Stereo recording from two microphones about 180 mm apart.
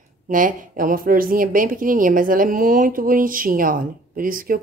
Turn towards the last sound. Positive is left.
turn(degrees=-50)  # may be behind; listen again after turning